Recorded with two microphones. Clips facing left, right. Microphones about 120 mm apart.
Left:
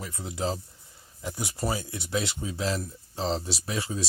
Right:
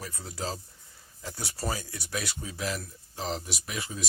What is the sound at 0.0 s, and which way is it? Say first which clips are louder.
Speech: left 5 dB; 20° left (ahead or behind).